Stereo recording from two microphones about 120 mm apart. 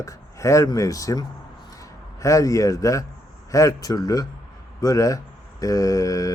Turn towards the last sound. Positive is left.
turn(degrees=30)  # may be behind; listen again after turning